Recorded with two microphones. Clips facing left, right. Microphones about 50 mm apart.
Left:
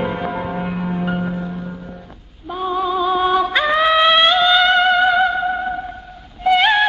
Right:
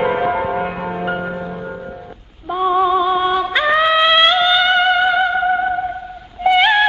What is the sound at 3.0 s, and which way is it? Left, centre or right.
Music, centre.